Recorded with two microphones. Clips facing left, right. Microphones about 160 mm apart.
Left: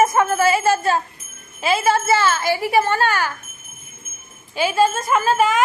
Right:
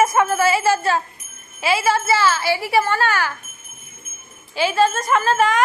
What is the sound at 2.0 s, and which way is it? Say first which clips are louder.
Speech: left 1 dB; 50° left (ahead or behind).